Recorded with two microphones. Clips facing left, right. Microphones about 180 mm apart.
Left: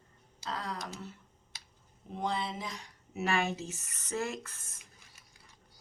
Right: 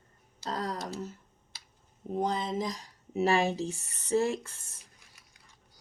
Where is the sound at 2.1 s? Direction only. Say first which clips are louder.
Right 5 dB; 40° right (ahead or behind).